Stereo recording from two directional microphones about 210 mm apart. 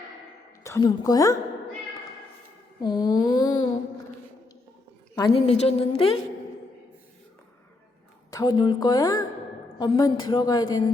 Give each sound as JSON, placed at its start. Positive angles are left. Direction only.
{"t": 0.6, "sound": "a woman's voice", "side_deg": 15}
{"t": 2.8, "sound": "a woman's voice", "side_deg": 20}
{"t": 5.1, "sound": "a woman's voice", "side_deg": 20}
{"t": 8.3, "sound": "a woman's voice", "side_deg": 20}